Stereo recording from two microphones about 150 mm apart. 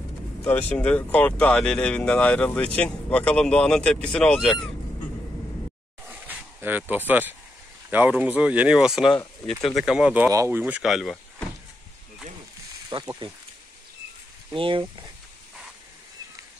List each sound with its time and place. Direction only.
0.5 s speech: 10° left (ahead or behind)
6.0 s a sound: 10° right (ahead or behind)
7.9 s speech: 10° right (ahead or behind)
10.3 s speech: 20° right (ahead or behind)
10.6 s speech: centre (ahead or behind)
12.9 s speech: 35° right (ahead or behind)
14.5 s speech: 35° right (ahead or behind)